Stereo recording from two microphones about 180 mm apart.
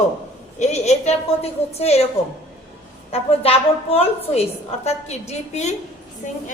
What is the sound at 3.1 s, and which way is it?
A woman's voice, 35° left (ahead or behind).